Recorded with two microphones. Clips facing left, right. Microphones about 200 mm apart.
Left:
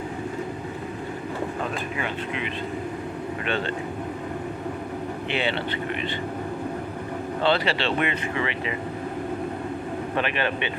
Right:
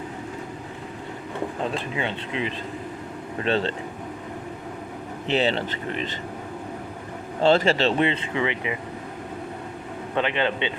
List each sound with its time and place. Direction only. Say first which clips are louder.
1.7 s speech: right 1 dB; 30° right (ahead or behind)
5.3 s speech: right 5 dB; 40° right (ahead or behind)
7.4 s speech: right 5 dB; 45° right (ahead or behind)
7.9 s speech: right 3 dB; 25° right (ahead or behind)
10.2 s speech: right 3 dB; 20° right (ahead or behind)